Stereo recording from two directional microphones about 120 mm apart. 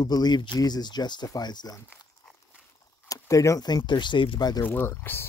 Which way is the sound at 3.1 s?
25° left (ahead or behind).